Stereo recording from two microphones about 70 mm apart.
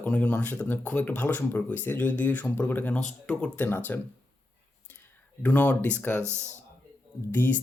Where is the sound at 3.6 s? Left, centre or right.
Left.